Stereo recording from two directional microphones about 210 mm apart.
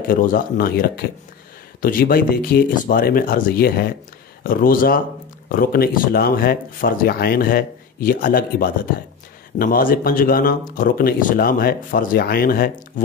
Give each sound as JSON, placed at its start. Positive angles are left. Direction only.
{"t": 0.1, "sound": "a man's voice", "side_deg": 45}